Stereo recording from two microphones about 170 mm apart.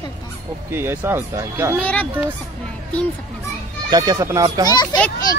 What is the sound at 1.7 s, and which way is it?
Speech, 10° left (ahead or behind).